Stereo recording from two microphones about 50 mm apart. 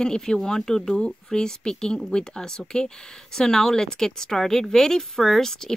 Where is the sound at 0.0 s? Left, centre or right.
Centre.